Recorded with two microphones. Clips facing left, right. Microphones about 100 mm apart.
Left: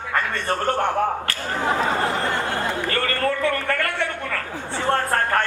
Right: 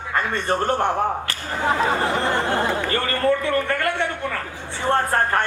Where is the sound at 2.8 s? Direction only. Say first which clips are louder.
Right 2 dB; 25° right (ahead or behind).